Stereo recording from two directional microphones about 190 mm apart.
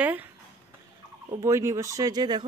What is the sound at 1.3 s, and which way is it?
Speech, 15° right (ahead or behind).